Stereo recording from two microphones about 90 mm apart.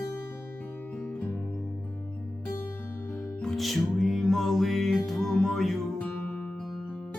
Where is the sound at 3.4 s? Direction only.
Centre (ahead or behind).